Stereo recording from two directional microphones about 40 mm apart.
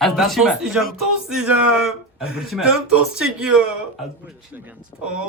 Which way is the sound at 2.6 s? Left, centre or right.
Right.